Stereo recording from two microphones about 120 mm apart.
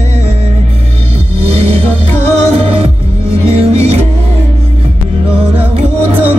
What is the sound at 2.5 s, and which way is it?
Music, 55° right (ahead or behind).